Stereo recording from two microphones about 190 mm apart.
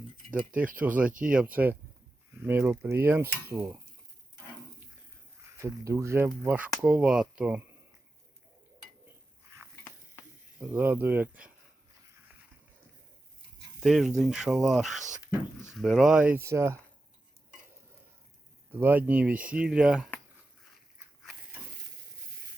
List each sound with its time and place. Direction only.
0.8 s speech: 10° right (ahead or behind)
5.4 s speech: 15° right (ahead or behind)
10.6 s speech: 10° right (ahead or behind)
13.8 s speech: centre (ahead or behind)
14.9 s speech: 40° right (ahead or behind)
15.8 s speech: centre (ahead or behind)
18.7 s speech: 10° right (ahead or behind)